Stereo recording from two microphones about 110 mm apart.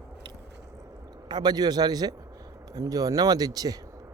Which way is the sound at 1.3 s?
40° right (ahead or behind).